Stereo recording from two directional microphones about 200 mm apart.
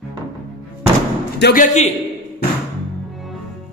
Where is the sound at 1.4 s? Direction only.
40° left (ahead or behind).